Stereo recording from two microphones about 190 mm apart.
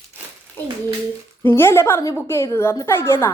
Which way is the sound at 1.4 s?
15° left (ahead or behind).